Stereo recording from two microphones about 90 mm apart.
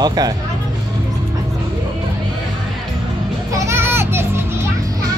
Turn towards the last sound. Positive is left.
turn(degrees=-25)  # may be behind; listen again after turning